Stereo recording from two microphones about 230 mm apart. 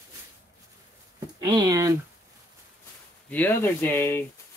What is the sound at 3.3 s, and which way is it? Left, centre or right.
Speech, centre.